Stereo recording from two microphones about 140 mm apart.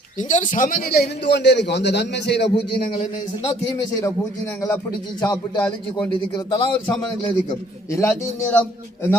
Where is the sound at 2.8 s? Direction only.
65° left (ahead or behind).